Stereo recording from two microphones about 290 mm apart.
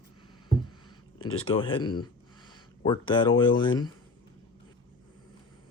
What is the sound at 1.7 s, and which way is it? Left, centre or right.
Speech, centre.